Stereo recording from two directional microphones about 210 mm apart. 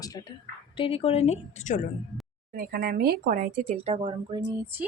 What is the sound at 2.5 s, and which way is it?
Speech, 45° right (ahead or behind).